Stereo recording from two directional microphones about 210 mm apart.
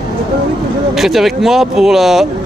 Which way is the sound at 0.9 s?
Centre (ahead or behind).